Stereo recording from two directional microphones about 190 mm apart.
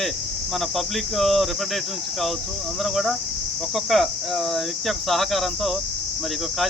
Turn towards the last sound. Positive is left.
turn(degrees=0)  # may be behind; listen again after turning